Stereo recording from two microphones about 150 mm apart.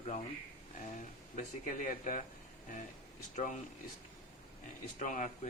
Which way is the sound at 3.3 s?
50° left (ahead or behind).